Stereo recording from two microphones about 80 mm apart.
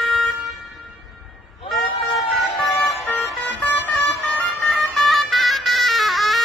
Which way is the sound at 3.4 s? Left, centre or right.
Left.